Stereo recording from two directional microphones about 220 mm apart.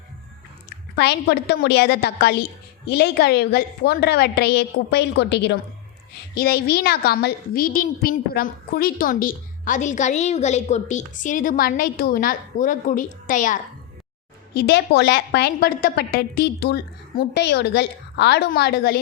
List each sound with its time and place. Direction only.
0.9 s a woman's voice: 50° left (ahead or behind)
14.5 s a woman's voice: 50° left (ahead or behind)